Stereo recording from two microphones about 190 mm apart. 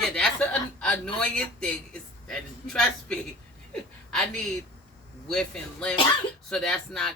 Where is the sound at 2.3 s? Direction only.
5° left (ahead or behind).